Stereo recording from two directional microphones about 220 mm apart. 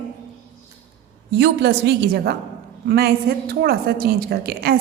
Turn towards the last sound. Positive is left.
turn(degrees=-45)  # may be behind; listen again after turning